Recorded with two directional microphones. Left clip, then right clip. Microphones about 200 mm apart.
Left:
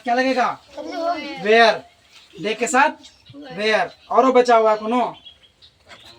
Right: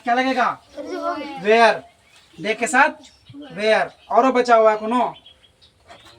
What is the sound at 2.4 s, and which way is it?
A man's voice, 10° right (ahead or behind).